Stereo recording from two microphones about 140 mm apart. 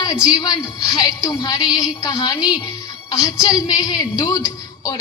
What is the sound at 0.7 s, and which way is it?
Speech, 25° left (ahead or behind).